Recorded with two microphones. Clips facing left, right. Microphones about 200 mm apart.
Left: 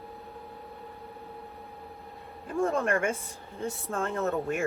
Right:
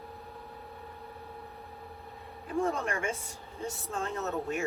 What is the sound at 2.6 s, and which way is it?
Speech, 50° left (ahead or behind).